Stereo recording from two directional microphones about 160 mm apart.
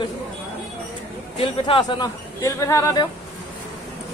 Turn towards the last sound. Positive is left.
turn(degrees=20)  # may be behind; listen again after turning